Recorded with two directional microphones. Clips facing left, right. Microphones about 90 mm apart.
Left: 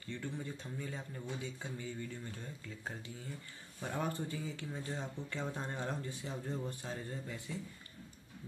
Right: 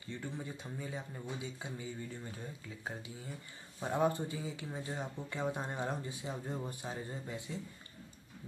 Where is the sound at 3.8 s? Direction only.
20° right (ahead or behind).